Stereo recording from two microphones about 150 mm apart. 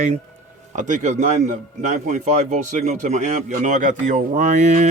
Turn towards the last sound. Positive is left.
turn(degrees=-50)  # may be behind; listen again after turning